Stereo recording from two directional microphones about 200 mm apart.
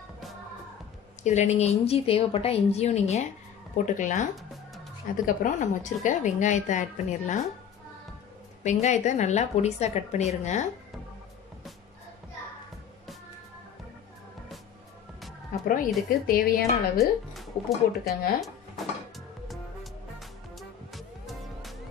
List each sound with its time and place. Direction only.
1.2 s a woman's voice: 35° left (ahead or behind)
8.6 s a woman's voice: 35° left (ahead or behind)
15.7 s speech: 45° left (ahead or behind)
17.0 s speech: centre (ahead or behind)
18.4 s music: centre (ahead or behind)